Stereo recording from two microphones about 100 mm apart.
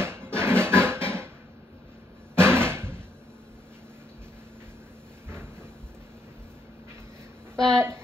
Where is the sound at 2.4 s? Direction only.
25° right (ahead or behind).